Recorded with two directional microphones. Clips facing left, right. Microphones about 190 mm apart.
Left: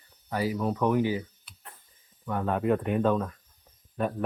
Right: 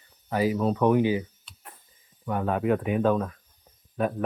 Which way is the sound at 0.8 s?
20° right (ahead or behind).